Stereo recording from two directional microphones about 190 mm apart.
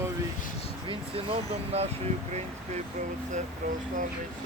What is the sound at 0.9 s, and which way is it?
Speech, 30° right (ahead or behind).